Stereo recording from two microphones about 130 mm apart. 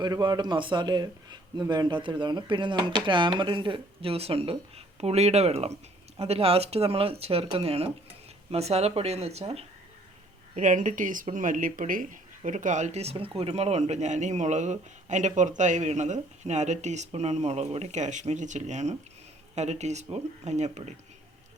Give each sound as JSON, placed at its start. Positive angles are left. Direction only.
{"t": 0.0, "sound": "speech", "side_deg": -35}
{"t": 10.5, "sound": "speech", "side_deg": -75}